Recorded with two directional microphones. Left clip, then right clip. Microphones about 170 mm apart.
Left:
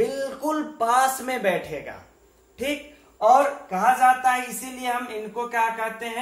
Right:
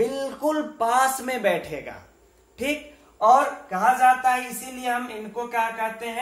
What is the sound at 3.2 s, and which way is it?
A man's voice, 15° right (ahead or behind).